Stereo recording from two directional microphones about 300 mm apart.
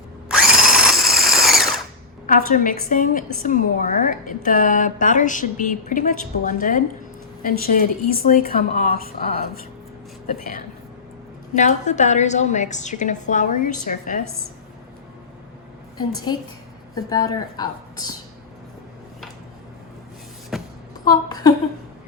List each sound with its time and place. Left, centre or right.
0.3 s drill: centre
2.5 s a woman's voice: left
16.0 s a woman's voice: centre
20.5 s a sound: centre
21.1 s speech: centre